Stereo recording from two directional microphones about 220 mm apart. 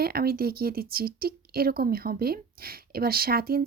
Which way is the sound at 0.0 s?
45° right (ahead or behind).